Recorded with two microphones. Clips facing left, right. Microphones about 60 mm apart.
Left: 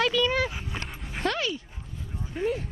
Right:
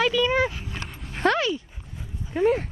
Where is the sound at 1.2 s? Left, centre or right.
Right.